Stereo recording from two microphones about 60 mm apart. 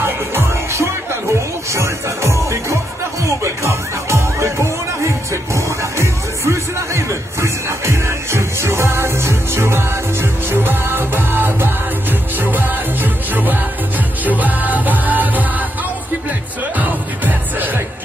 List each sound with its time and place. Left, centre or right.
0.0 s music: right